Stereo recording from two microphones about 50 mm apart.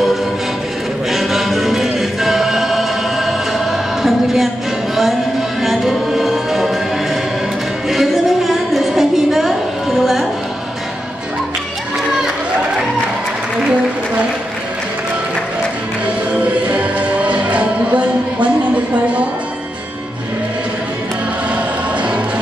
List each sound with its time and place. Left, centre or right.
1.1 s music: centre
5.6 s music: centre
7.9 s a sound: centre
16.6 s music: right